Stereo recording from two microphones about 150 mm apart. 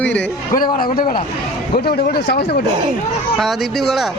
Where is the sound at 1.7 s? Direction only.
90° left.